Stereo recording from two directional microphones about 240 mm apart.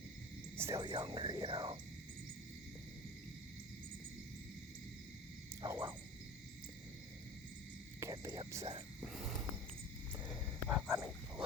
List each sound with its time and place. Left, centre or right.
0.5 s speech: centre
5.6 s frog: centre
8.0 s whispering: centre
10.7 s dog: centre